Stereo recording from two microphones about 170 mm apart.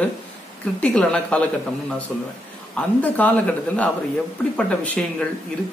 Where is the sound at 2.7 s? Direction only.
10° left (ahead or behind).